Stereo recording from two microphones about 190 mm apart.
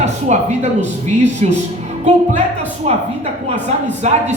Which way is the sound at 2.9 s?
35° right (ahead or behind).